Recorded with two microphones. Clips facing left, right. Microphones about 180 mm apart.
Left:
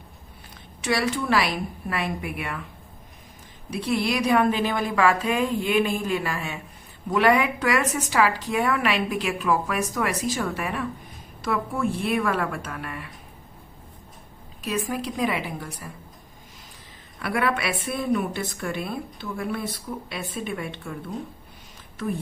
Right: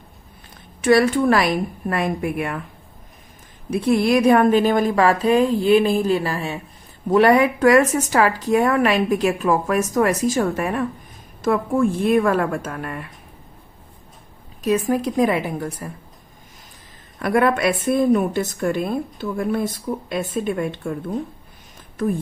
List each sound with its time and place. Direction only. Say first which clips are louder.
0.8 s speech: right 10 dB; 50° right (ahead or behind)
3.7 s a woman's voice: right 8 dB; 50° right (ahead or behind)
14.6 s speech: right 9 dB; 45° right (ahead or behind)
17.2 s speech: right 7 dB; 45° right (ahead or behind)